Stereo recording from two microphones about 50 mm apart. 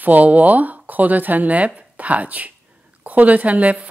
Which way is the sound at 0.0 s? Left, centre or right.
Right.